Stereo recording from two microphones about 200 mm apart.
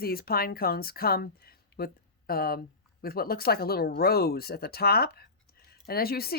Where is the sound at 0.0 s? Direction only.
50° left (ahead or behind).